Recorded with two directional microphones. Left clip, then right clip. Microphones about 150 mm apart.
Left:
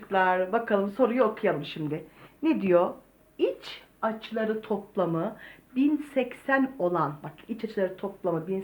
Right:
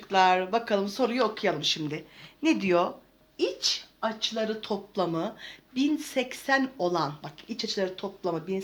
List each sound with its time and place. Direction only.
0.1 s speech: 30° right (ahead or behind)
4.0 s speech: 25° right (ahead or behind)